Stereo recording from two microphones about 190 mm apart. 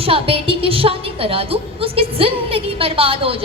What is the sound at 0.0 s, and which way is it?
A woman's voice, 30° right (ahead or behind).